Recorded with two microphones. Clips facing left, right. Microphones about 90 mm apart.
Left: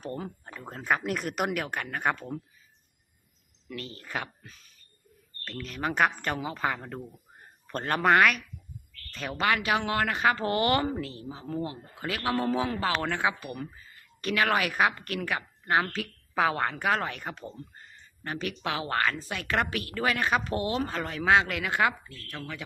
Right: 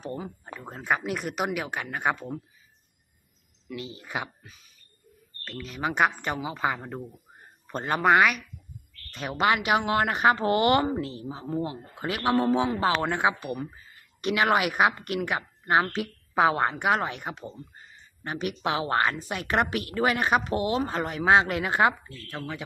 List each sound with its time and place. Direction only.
0.0 s speech: 15° right (ahead or behind)
3.8 s speech: 15° right (ahead or behind)
9.1 s speech: 20° right (ahead or behind)